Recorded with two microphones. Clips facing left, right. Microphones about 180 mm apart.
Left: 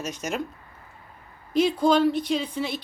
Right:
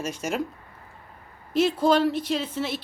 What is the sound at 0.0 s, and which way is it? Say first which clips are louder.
Speech: right 2 dB; 5° right (ahead or behind).